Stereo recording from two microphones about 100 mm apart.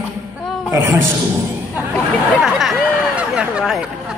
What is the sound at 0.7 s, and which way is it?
Speech, 25° right (ahead or behind).